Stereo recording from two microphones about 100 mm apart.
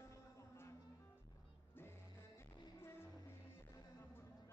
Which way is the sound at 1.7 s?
25° left (ahead or behind).